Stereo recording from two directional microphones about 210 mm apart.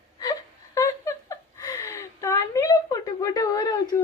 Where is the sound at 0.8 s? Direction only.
15° left (ahead or behind).